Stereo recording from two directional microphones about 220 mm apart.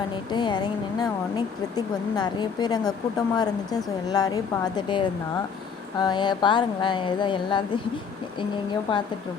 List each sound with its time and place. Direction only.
0.3 s speech: 20° left (ahead or behind)